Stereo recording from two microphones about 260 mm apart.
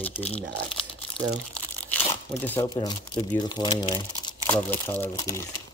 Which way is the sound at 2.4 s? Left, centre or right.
Centre.